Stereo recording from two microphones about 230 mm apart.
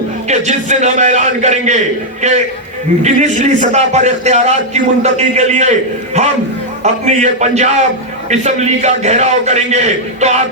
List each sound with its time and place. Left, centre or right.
0.3 s a man's voice: right
6.8 s a man's voice: right